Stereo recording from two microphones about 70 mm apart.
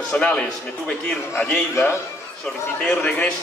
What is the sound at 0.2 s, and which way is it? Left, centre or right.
Speech, centre.